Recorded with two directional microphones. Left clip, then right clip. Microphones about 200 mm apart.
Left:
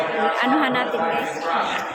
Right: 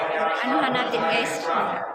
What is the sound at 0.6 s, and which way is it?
Speech, 25° left (ahead or behind).